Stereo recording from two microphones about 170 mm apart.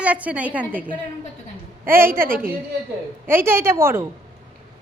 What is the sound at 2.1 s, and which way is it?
Speech, 55° right (ahead or behind).